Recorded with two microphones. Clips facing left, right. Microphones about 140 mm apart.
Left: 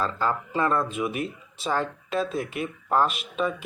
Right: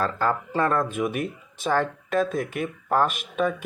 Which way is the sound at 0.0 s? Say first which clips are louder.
Right 2 dB; 50° right (ahead or behind).